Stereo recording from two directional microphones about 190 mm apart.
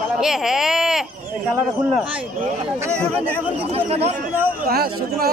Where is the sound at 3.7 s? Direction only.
30° right (ahead or behind).